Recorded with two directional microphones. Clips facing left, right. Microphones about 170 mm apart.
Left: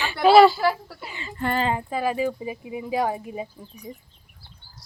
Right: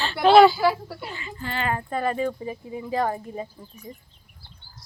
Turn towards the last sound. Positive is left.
turn(degrees=10)  # may be behind; listen again after turning